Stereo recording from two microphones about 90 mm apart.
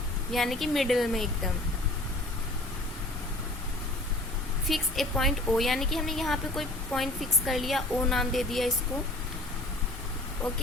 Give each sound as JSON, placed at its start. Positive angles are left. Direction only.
{"t": 0.3, "sound": "a woman's voice", "side_deg": 0}
{"t": 4.7, "sound": "a woman's voice", "side_deg": 0}